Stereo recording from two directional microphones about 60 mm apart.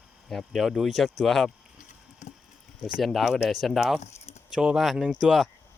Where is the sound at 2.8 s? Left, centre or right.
Centre.